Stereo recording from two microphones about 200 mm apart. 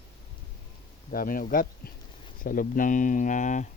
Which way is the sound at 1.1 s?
45° left (ahead or behind).